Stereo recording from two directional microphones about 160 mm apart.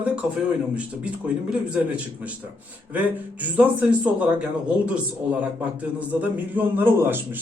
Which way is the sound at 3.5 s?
10° right (ahead or behind).